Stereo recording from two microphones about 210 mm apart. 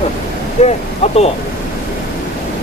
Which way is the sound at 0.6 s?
30° left (ahead or behind).